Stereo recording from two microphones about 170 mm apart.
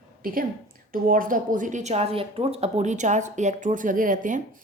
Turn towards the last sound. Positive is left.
turn(degrees=-50)  # may be behind; listen again after turning